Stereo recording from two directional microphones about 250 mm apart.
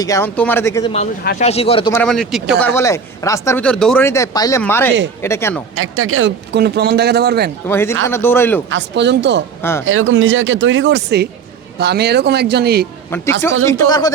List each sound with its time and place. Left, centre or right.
0.0 s speech: centre
1.2 s speech: left
1.5 s speech: left
1.9 s speech: centre
5.7 s a man's voice: right
7.7 s speech: centre
8.7 s a man's voice: right
13.1 s speech: centre